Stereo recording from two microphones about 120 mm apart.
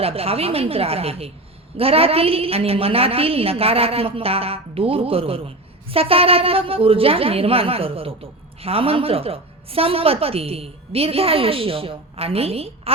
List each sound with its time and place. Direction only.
0.0 s a woman's voice: 55° right (ahead or behind)